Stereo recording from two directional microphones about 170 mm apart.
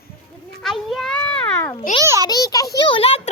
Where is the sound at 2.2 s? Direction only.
20° left (ahead or behind).